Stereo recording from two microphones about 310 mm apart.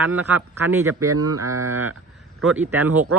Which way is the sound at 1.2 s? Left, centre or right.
Right.